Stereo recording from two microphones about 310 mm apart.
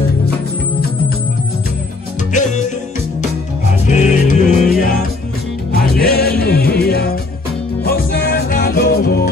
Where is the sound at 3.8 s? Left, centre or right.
Left.